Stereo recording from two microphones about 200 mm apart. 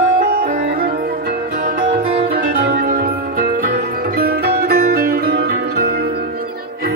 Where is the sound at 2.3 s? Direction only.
45° right (ahead or behind).